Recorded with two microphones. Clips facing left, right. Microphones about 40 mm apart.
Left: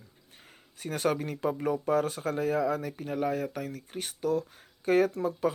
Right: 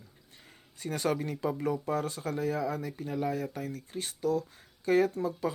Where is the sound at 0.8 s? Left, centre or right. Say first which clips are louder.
Left 2 dB; left.